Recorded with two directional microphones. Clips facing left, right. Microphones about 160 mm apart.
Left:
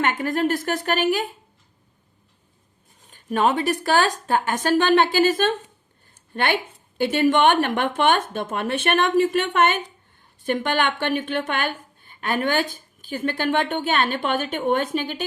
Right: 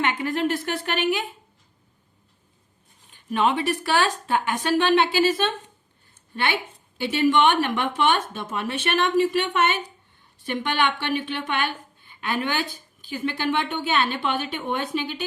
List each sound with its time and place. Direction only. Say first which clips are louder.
0.0 s a woman's voice: left 2 dB; 45° left (ahead or behind)
3.1 s a woman's voice: left 2 dB; 45° left (ahead or behind)